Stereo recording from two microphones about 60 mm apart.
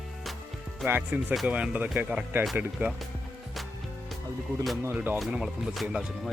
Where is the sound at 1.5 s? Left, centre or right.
Right.